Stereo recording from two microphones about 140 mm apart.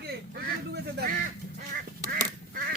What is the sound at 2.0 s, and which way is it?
Duck, 90° right.